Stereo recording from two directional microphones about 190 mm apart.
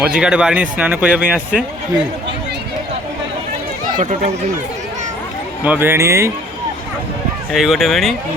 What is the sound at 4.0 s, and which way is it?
Speech, 35° right (ahead or behind).